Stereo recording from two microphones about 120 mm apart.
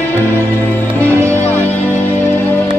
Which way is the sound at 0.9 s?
15° left (ahead or behind).